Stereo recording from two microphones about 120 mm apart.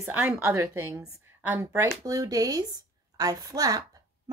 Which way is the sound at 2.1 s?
30° right (ahead or behind).